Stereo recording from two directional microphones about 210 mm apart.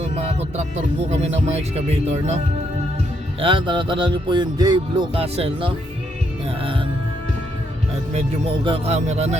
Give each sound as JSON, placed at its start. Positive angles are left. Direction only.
{"t": 0.0, "sound": "music", "side_deg": -30}
{"t": 1.1, "sound": "speech", "side_deg": -30}
{"t": 3.4, "sound": "speech", "side_deg": -25}
{"t": 8.6, "sound": "speech", "side_deg": -25}